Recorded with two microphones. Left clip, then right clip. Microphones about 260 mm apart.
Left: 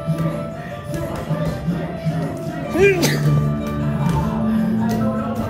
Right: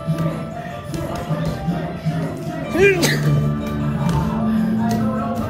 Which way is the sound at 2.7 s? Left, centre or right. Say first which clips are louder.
Even; right.